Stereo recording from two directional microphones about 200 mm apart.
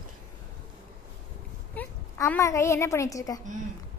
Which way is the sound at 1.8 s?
10° left (ahead or behind).